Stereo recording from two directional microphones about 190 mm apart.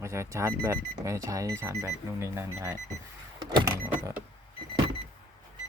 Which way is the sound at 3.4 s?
20° right (ahead or behind).